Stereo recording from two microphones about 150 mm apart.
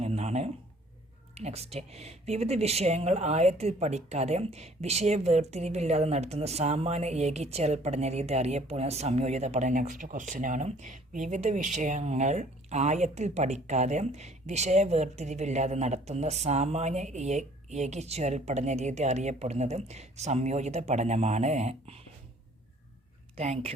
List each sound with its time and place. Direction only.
0.0 s a sound: 45° right (ahead or behind)
1.4 s speech: 45° right (ahead or behind)
23.4 s speech: 45° right (ahead or behind)